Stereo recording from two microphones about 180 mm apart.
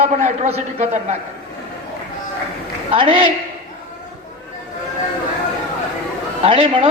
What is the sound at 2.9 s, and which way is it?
Speech, 30° right (ahead or behind).